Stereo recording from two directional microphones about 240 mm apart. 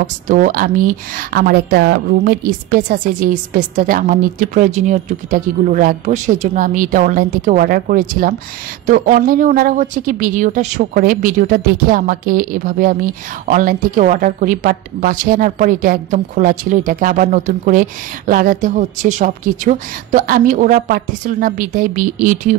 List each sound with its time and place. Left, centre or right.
0.3 s speech: right